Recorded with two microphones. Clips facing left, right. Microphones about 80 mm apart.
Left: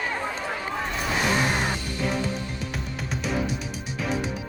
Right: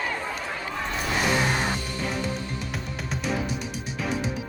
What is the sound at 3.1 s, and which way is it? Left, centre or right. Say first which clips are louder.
Music: left 1 dB; centre.